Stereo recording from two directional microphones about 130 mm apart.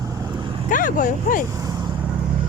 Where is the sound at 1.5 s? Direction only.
25° right (ahead or behind).